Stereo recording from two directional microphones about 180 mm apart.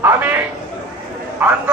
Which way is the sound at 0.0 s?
10° right (ahead or behind).